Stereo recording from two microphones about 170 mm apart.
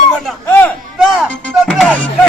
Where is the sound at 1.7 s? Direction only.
5° left (ahead or behind).